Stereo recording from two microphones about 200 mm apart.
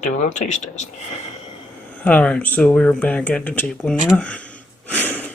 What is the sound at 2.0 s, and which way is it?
Speech, 5° left (ahead or behind).